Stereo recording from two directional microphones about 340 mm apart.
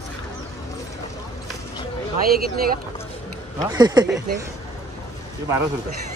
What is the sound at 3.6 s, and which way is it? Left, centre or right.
Speech, centre.